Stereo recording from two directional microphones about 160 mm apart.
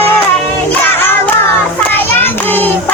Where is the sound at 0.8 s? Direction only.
15° left (ahead or behind).